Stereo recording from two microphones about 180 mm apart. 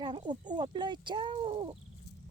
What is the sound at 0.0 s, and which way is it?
Cat, 25° right (ahead or behind).